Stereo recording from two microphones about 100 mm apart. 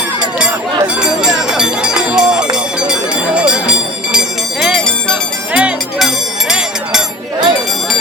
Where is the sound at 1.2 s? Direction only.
5° right (ahead or behind).